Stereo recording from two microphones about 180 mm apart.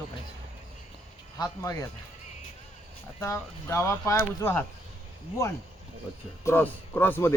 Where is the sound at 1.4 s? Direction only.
15° left (ahead or behind).